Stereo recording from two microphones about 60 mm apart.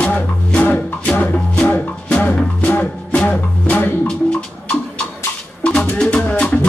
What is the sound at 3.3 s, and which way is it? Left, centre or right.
Music, left.